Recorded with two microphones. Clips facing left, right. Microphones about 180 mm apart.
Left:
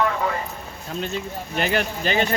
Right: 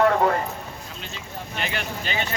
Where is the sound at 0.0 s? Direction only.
50° right (ahead or behind).